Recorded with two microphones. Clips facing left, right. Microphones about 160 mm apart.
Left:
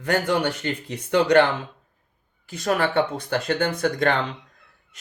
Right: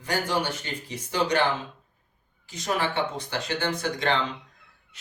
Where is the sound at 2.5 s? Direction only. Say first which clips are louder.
Left 5 dB; 55° left (ahead or behind).